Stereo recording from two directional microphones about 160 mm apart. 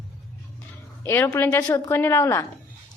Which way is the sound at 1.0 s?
15° left (ahead or behind).